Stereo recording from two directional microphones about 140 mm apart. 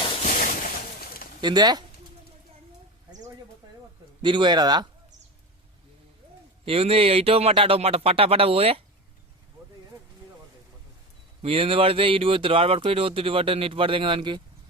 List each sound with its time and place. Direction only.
0.2 s a sound: 65° left (ahead or behind); by 1.3 s 90° left
1.4 s speech: 30° right (ahead or behind)
4.2 s speech: 35° right (ahead or behind)
6.7 s speech: 45° right (ahead or behind)
11.4 s speech: 45° right (ahead or behind)